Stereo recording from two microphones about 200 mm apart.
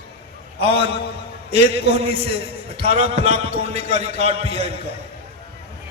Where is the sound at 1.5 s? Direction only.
30° right (ahead or behind).